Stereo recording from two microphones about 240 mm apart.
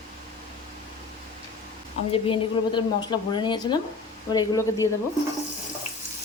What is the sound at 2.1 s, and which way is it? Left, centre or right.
A woman's voice, left.